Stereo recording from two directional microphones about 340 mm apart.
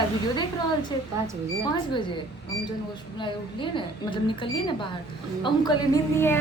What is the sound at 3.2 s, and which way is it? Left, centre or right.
A woman's voice, centre.